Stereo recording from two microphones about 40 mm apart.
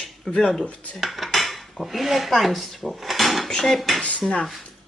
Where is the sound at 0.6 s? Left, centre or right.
Left.